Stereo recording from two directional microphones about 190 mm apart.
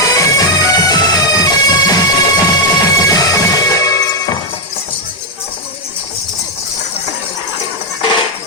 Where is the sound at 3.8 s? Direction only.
20° left (ahead or behind).